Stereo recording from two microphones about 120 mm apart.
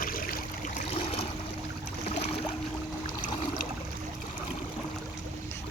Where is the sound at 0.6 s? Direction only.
90° left.